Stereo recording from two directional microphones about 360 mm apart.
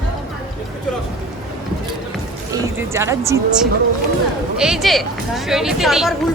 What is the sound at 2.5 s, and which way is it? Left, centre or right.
A woman's voice, centre.